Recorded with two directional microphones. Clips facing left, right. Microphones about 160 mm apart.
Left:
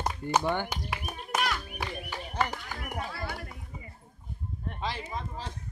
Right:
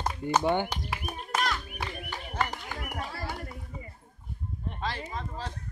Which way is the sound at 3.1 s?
30° right (ahead or behind).